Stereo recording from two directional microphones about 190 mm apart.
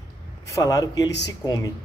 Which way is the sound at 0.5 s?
20° left (ahead or behind).